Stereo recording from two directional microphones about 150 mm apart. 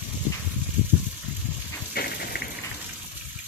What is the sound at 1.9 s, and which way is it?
Rain, 90° left.